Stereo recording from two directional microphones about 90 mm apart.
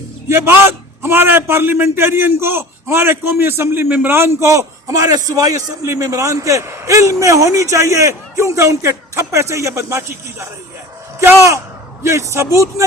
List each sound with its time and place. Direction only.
0.3 s a man's voice: 25° right (ahead or behind)